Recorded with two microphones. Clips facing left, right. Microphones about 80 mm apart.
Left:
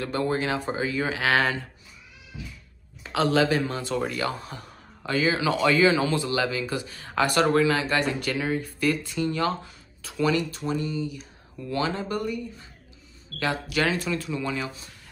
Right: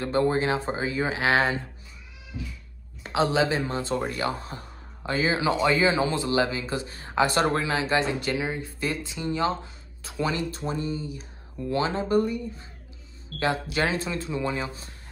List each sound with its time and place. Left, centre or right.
0.0 s speech: right
3.1 s speech: right